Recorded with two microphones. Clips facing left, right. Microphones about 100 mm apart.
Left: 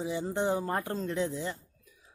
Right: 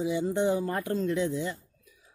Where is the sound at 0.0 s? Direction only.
35° left (ahead or behind).